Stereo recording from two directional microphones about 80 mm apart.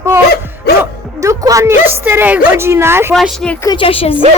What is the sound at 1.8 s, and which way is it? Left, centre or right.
A woman's voice, right.